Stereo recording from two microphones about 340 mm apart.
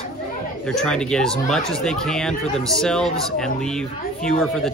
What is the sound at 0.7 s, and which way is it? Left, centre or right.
Speech, centre.